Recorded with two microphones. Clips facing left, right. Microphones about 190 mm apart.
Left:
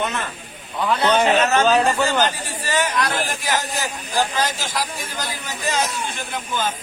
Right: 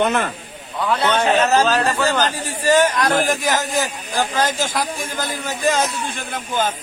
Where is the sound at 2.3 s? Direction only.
45° right (ahead or behind).